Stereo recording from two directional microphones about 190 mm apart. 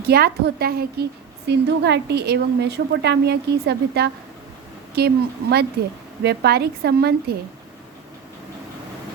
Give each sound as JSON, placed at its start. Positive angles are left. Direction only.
{"t": 0.1, "sound": "a woman's voice", "side_deg": -55}